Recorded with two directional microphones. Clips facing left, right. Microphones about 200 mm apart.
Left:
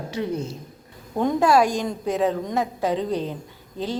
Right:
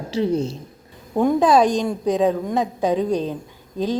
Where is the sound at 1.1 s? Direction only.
15° right (ahead or behind).